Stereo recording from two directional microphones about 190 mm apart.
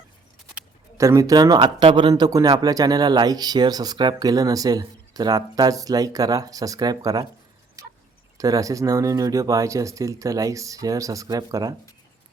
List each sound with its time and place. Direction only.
0.5 s speech: 15° right (ahead or behind)
7.8 s tick-tock: 15° right (ahead or behind)
8.4 s speech: 20° right (ahead or behind)